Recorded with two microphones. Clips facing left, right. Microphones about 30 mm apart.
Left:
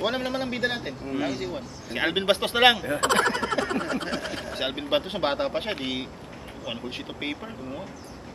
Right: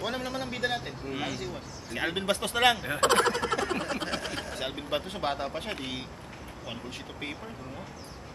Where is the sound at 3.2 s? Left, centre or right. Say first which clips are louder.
Left 2 dB; centre.